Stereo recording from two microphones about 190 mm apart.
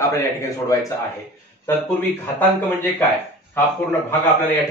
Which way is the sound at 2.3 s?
10° left (ahead or behind).